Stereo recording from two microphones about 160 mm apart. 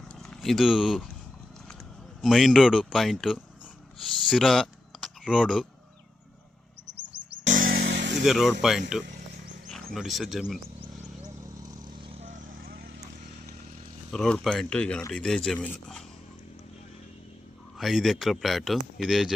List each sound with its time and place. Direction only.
0.2 s speech: centre (ahead or behind)
2.2 s a man's voice: centre (ahead or behind)
7.4 s a sound: 60° right (ahead or behind); by 8.1 s 90° right
8.2 s a man's voice: centre (ahead or behind)
11.2 s vehicle: 25° right (ahead or behind)
12.1 s vehicle: 50° right (ahead or behind); by 13.0 s 85° right
14.1 s a man's voice: 5° left (ahead or behind)
17.7 s a man's voice: centre (ahead or behind)